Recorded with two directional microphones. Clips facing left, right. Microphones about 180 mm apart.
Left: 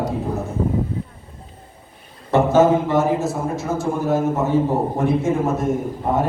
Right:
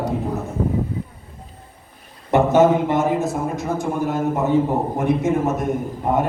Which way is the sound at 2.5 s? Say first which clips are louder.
Left 1 dB; 20° right (ahead or behind).